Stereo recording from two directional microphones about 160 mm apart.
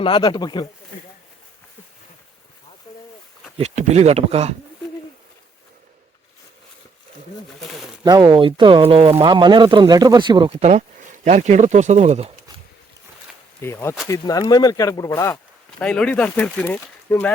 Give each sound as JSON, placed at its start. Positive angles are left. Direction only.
{"t": 0.0, "sound": "speech", "side_deg": 30}
{"t": 2.9, "sound": "boat", "side_deg": 30}
{"t": 3.6, "sound": "speech", "side_deg": -45}
{"t": 8.0, "sound": "speech", "side_deg": -25}
{"t": 13.6, "sound": "speech", "side_deg": 15}
{"t": 15.8, "sound": "speech", "side_deg": 5}